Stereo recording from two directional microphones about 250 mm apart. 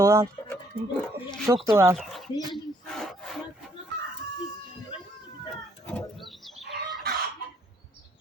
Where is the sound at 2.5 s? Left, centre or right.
Centre.